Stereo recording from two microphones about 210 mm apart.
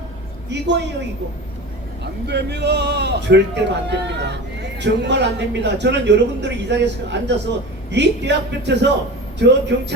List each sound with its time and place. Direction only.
0.5 s a man's voice: 55° right (ahead or behind)
2.2 s a man's voice: 55° right (ahead or behind)